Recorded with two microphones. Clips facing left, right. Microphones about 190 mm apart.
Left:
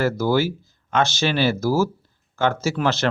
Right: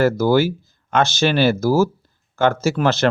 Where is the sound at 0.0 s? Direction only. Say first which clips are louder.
Right 4 dB; 50° right (ahead or behind).